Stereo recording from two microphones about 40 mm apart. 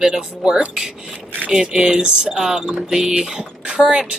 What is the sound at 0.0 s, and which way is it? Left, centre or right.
Speech, centre.